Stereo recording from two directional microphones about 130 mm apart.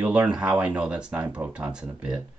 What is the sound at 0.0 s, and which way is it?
Speech, 10° right (ahead or behind).